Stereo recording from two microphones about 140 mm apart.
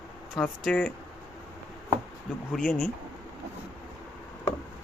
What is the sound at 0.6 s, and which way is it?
Speech, 5° left (ahead or behind).